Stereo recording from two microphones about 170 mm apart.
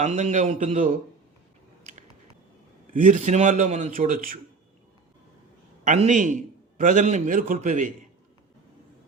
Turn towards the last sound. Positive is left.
turn(degrees=-45)  # may be behind; listen again after turning